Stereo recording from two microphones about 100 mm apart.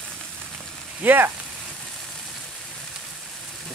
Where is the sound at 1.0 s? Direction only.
20° right (ahead or behind).